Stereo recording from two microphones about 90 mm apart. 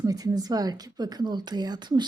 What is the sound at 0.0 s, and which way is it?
A woman's voice, 40° right (ahead or behind).